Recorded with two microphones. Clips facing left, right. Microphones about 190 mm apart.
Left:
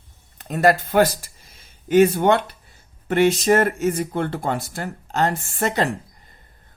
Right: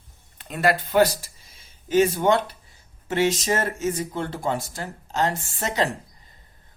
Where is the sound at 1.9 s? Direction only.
60° left (ahead or behind).